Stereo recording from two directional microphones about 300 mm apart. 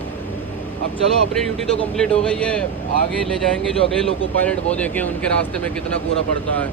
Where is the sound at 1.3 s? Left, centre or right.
Centre.